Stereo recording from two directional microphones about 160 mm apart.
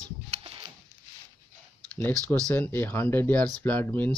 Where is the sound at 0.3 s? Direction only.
35° right (ahead or behind).